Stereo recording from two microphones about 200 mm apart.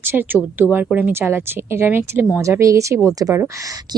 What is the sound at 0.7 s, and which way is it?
A woman's voice, 10° right (ahead or behind).